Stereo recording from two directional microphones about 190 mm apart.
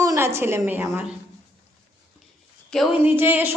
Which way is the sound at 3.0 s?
10° right (ahead or behind).